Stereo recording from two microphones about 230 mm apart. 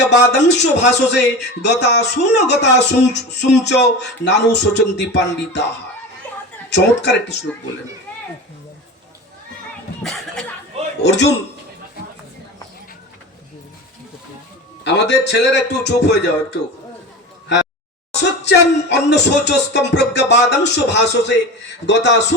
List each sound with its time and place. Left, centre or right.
0.0 s music: left
6.7 s music: left
10.0 s a sound: centre
11.0 s music: left
14.9 s music: left
18.2 s music: left